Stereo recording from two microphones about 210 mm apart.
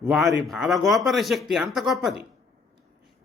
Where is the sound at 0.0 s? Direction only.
Centre (ahead or behind).